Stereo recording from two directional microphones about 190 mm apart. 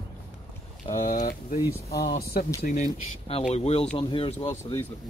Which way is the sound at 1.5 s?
55° left (ahead or behind).